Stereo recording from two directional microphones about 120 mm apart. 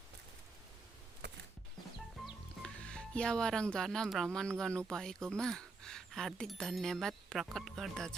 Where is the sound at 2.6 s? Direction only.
5° left (ahead or behind).